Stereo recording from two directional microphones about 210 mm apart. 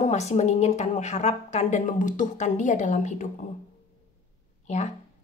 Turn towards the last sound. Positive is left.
turn(degrees=30)  # may be behind; listen again after turning